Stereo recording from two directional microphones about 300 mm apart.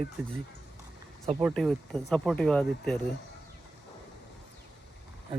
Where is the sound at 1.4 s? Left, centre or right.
Centre.